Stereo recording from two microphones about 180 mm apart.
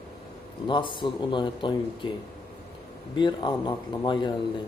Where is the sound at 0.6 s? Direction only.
25° left (ahead or behind).